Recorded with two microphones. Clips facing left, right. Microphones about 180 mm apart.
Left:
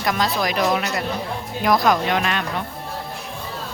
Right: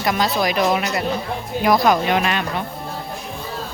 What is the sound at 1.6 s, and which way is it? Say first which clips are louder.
Speech: right 2 dB; 5° right (ahead or behind).